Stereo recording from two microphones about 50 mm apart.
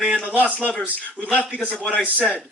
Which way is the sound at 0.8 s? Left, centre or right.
Left.